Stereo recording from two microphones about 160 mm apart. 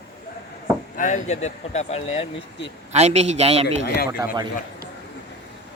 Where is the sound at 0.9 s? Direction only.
50° left (ahead or behind).